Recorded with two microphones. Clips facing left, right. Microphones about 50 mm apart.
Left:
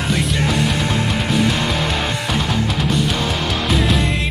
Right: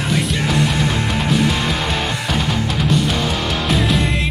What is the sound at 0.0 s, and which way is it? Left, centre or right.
Music, centre.